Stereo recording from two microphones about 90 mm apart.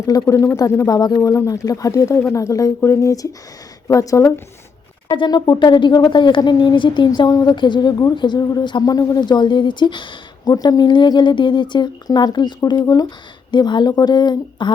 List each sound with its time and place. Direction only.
0.0 s a woman's voice: 45° left (ahead or behind)
0.3 s speech: 30° left (ahead or behind)
0.9 s speech: 45° left (ahead or behind)
5.0 s speech: 70° left (ahead or behind)
5.3 s speech: 55° left (ahead or behind)
7.3 s a woman's voice: 40° left (ahead or behind)
7.5 s a woman's voice: 60° left (ahead or behind)
8.1 s speech: 60° left (ahead or behind)
10.5 s a woman's voice: 45° left (ahead or behind)